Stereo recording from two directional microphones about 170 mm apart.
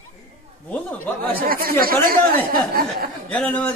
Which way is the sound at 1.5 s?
60° right (ahead or behind).